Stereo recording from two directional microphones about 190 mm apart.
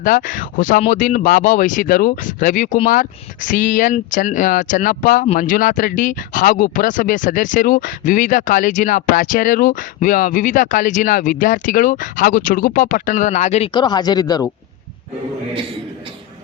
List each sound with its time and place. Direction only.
0.0 s speech: 45° left (ahead or behind)
13.7 s speech: 20° left (ahead or behind)